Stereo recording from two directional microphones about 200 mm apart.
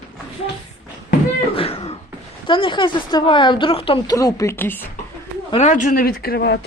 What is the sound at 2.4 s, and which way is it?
A woman's voice, 25° left (ahead or behind).